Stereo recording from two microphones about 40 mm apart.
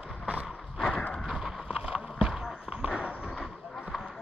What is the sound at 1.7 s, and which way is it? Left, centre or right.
Run, right.